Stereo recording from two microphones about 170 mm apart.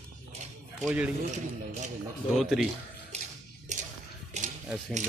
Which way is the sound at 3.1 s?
40° right (ahead or behind).